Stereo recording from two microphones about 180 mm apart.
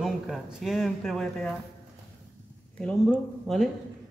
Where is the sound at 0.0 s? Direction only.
Centre (ahead or behind).